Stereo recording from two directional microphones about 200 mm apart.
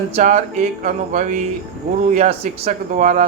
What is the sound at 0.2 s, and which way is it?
Speech, 35° right (ahead or behind).